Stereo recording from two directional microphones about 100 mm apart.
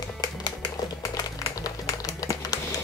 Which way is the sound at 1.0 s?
40° left (ahead or behind).